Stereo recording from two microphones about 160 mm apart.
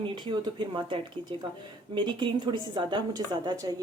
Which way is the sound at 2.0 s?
30° right (ahead or behind).